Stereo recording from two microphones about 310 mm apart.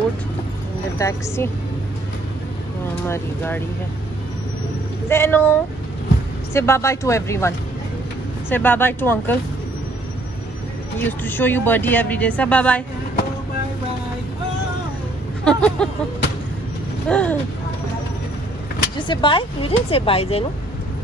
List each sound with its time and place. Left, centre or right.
0.9 s speech: centre
3.1 s speech: centre
5.0 s speech: centre
11.0 s a woman's voice: centre
15.4 s a sound: centre
17.1 s a woman's voice: centre
18.9 s speech: centre